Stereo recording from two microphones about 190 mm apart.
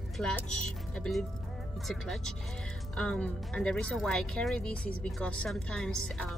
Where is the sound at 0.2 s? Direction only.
5° left (ahead or behind).